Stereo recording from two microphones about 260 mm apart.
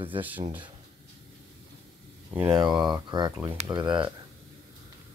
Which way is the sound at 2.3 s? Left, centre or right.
Centre.